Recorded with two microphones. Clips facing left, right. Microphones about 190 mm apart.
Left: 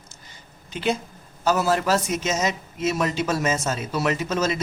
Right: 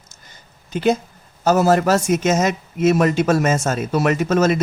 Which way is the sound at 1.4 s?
45° right (ahead or behind).